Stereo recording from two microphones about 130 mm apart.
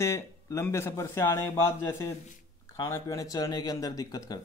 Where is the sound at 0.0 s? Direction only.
20° left (ahead or behind).